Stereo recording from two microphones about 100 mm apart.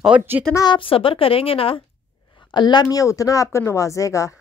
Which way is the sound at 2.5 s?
50° left (ahead or behind).